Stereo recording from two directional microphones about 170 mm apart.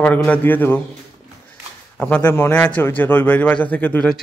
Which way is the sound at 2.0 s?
10° left (ahead or behind).